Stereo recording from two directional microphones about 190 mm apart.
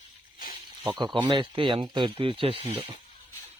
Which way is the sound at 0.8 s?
25° right (ahead or behind).